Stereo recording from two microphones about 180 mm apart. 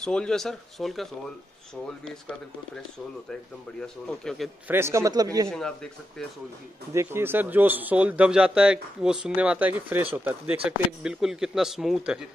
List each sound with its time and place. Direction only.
0.0 s speech: 5° left (ahead or behind)
3.8 s speech: 5° left (ahead or behind)
4.6 s speech: 15° right (ahead or behind)
6.9 s speech: 15° right (ahead or behind)